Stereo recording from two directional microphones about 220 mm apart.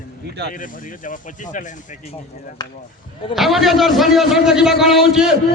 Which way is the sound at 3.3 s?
Centre (ahead or behind).